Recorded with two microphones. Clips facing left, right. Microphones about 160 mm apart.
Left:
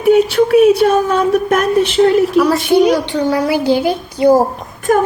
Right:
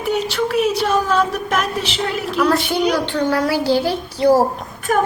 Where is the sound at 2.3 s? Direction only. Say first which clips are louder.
Left 6 dB; 5° left (ahead or behind).